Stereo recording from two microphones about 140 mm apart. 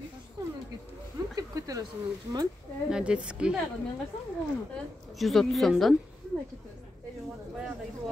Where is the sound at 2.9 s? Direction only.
5° right (ahead or behind).